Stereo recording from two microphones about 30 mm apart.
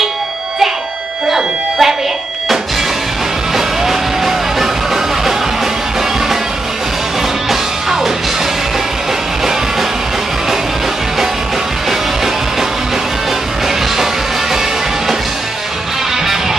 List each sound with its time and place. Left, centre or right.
1.3 s music: centre
3.5 s music: centre